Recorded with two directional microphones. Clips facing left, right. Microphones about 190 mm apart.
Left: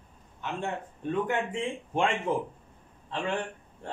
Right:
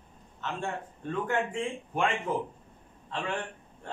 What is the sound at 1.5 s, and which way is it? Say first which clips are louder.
Speech: left 1 dB; 25° left (ahead or behind).